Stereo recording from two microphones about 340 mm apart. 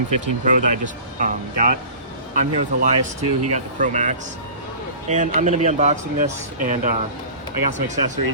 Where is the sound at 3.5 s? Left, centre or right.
Right.